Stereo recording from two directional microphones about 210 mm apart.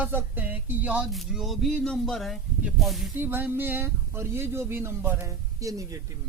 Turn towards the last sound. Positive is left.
turn(degrees=-15)  # may be behind; listen again after turning